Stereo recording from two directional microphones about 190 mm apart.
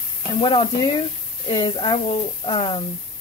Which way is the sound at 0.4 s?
25° left (ahead or behind).